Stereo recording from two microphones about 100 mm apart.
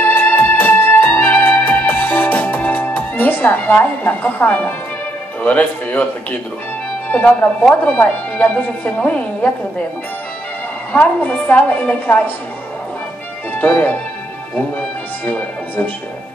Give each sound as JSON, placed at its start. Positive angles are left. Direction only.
{"t": 0.0, "sound": "music", "side_deg": 20}
{"t": 5.4, "sound": "a woman's voice", "side_deg": 15}
{"t": 7.1, "sound": "a woman's voice", "side_deg": 15}
{"t": 10.9, "sound": "a woman's voice", "side_deg": 15}
{"t": 13.6, "sound": "speech", "side_deg": 20}
{"t": 15.2, "sound": "speech", "side_deg": 15}